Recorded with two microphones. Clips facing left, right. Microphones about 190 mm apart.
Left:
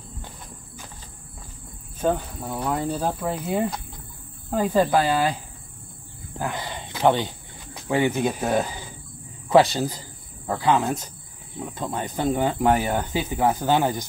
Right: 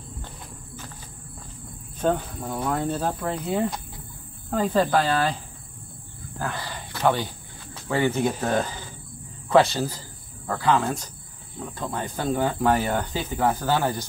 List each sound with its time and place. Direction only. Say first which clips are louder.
2.0 s speech: even; 5° left (ahead or behind)
6.3 s cricket: left 2 dB; 20° left (ahead or behind)
9.5 s speech: left 2 dB; 15° left (ahead or behind)